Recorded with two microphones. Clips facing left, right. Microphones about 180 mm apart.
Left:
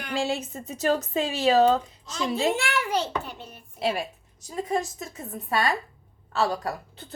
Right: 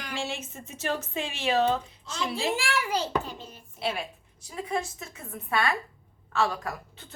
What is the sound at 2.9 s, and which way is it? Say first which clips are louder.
Speech: left 1 dB; 60° left (ahead or behind).